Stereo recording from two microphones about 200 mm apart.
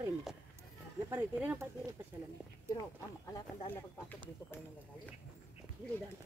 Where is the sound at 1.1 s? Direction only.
10° right (ahead or behind).